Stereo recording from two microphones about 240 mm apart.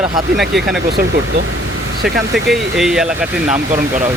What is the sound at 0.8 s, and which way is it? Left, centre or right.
Speech, right.